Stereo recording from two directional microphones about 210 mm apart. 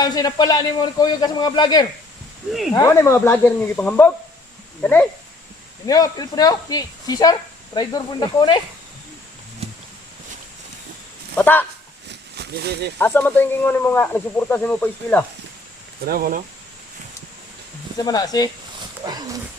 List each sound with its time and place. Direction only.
0.0 s speech: 20° left (ahead or behind)
11.3 s speech: 10° left (ahead or behind)
12.0 s a sound: 50° right (ahead or behind)
13.0 s speech: 10° left (ahead or behind)
16.0 s speech: 45° right (ahead or behind)
18.0 s speech: 20° left (ahead or behind)
19.0 s dog: 20° right (ahead or behind)